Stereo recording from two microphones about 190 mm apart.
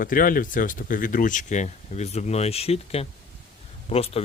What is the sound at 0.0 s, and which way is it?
Speech, 45° left (ahead or behind).